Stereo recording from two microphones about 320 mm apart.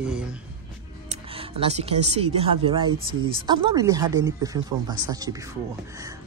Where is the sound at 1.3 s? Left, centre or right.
Centre.